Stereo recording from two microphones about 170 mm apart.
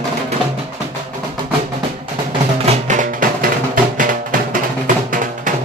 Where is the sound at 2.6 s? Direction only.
45° right (ahead or behind).